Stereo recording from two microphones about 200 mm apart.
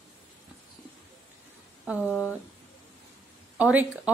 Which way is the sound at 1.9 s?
5° right (ahead or behind).